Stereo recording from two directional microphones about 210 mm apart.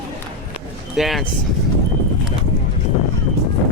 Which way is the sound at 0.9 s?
Centre (ahead or behind).